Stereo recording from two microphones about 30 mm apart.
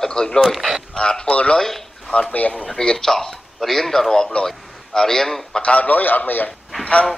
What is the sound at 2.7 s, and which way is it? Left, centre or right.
Speech, left.